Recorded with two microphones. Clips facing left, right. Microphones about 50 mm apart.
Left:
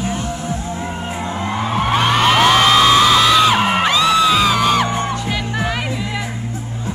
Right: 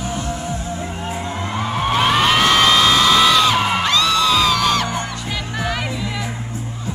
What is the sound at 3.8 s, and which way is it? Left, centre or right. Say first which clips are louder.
Music: left 3 dB; centre.